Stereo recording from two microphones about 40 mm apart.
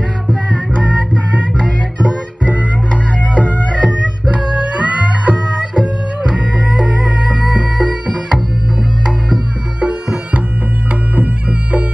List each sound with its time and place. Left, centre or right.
2.9 s music: left
4.7 s music: right